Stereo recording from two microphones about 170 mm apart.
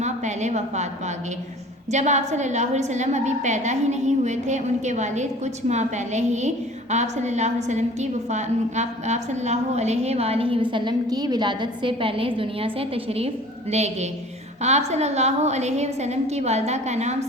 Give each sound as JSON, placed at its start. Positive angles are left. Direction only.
{"t": 0.0, "sound": "a woman's voice", "side_deg": -45}